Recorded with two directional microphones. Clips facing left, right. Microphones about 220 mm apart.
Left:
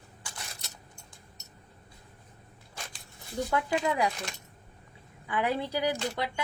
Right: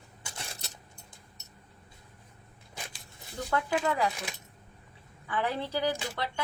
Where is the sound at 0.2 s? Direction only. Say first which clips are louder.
Right 2 dB; 25° right (ahead or behind).